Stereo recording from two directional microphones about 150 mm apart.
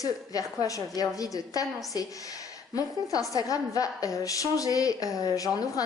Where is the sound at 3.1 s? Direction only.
25° left (ahead or behind).